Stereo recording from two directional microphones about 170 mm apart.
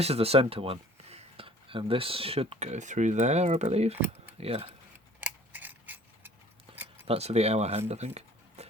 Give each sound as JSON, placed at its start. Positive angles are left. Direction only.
{"t": 0.0, "sound": "speech", "side_deg": -35}
{"t": 5.2, "sound": "a sound", "side_deg": -10}
{"t": 6.7, "sound": "keys jangling", "side_deg": -10}
{"t": 7.1, "sound": "speech", "side_deg": -35}